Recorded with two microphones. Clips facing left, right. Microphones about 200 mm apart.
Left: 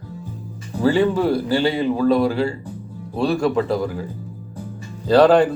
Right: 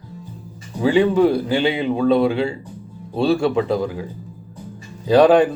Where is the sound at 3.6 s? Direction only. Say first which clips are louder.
Right 1 dB; 15° right (ahead or behind).